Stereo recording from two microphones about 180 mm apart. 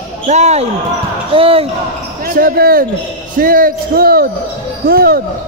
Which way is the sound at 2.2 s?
55° right (ahead or behind).